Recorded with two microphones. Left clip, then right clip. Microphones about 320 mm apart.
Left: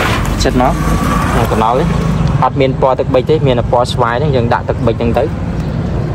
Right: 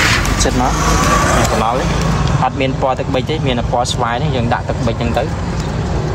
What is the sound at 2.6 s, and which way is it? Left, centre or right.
Speech, left.